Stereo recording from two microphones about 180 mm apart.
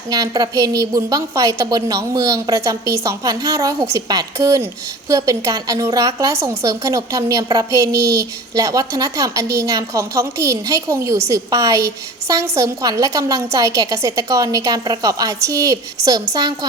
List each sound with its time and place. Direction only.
0.1 s a woman's voice: 20° right (ahead or behind)